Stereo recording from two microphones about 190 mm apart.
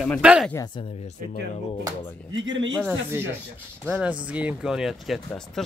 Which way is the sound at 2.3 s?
80° right.